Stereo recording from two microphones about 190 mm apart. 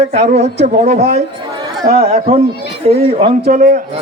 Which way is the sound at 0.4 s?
60° right (ahead or behind).